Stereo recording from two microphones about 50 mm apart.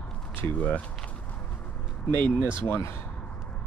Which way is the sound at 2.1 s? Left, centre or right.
Left.